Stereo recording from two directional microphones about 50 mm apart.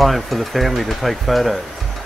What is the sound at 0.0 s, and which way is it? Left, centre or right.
Speech, centre.